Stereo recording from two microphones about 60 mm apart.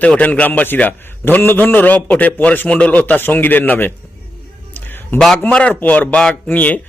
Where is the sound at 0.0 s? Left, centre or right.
Left.